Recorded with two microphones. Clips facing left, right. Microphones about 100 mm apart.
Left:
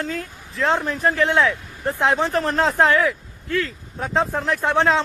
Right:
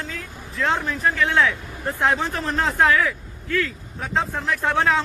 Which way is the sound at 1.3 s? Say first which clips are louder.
Left 1 dB; 20° left (ahead or behind).